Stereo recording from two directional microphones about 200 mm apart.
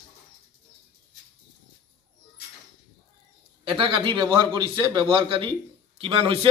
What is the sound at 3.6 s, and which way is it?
A man's voice, 25° right (ahead or behind).